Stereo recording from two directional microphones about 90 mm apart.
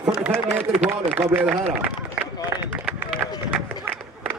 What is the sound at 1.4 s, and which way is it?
Speech, 10° right (ahead or behind).